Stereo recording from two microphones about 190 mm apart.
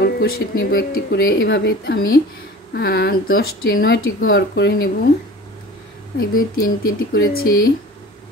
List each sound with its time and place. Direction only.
0.0 s speech: 55° left (ahead or behind)
6.1 s speech: 50° left (ahead or behind)